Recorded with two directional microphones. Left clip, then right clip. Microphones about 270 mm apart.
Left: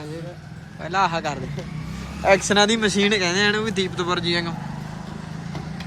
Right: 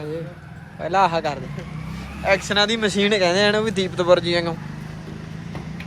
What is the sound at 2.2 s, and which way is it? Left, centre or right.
Speech, left.